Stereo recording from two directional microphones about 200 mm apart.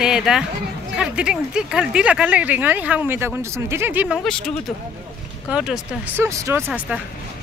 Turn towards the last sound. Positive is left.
turn(degrees=-5)  # may be behind; listen again after turning